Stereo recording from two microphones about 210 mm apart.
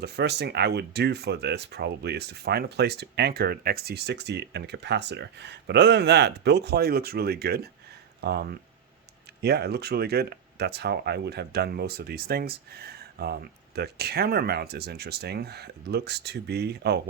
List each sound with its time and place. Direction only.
0.0 s speech: 50° right (ahead or behind)